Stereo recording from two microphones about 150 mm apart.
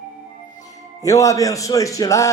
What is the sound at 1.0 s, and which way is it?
Speech, 20° left (ahead or behind).